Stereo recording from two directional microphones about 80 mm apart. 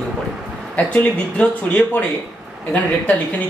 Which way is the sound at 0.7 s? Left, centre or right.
Centre.